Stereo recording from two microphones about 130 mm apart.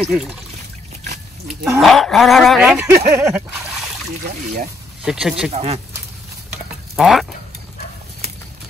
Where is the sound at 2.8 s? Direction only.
20° right (ahead or behind).